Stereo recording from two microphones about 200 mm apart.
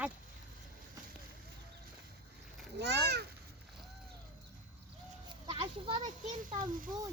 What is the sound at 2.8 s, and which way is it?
Speech, 55° right (ahead or behind).